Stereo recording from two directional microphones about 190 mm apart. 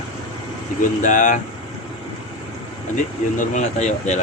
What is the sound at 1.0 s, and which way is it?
Speech, 40° left (ahead or behind).